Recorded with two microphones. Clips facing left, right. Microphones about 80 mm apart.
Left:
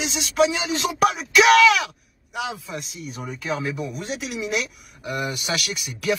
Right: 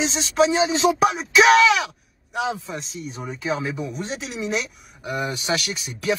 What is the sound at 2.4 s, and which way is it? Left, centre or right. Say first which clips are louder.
Speech: right 5 dB; right.